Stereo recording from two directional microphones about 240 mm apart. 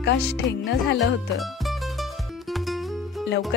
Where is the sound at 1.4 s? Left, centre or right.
Centre.